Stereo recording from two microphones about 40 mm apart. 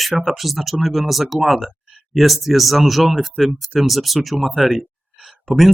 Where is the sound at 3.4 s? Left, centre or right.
Centre.